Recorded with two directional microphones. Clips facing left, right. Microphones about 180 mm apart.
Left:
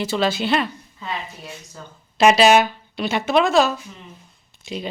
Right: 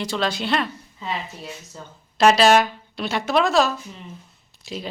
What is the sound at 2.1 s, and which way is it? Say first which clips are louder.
Speech: left 1 dB; 5° left (ahead or behind).